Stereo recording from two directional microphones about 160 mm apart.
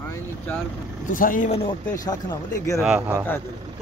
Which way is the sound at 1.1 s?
55° left (ahead or behind).